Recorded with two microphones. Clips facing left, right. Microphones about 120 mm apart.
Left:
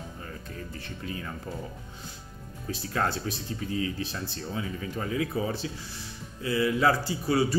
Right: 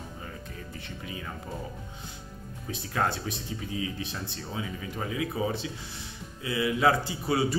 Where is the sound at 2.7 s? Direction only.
20° right (ahead or behind).